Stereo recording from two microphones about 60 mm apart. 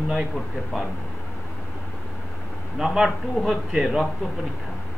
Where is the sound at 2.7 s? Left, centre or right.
Centre.